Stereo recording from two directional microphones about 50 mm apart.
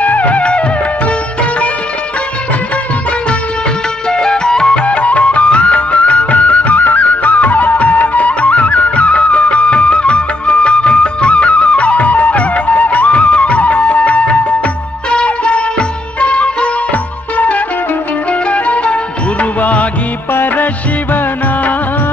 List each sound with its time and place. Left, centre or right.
0.0 s music: left
4.1 s music: centre
19.6 s music of bollywood: left
20.3 s music: left